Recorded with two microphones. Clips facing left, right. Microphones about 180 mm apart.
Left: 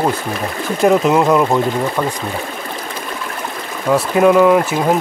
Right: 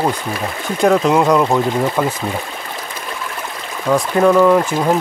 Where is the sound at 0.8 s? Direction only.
Centre (ahead or behind).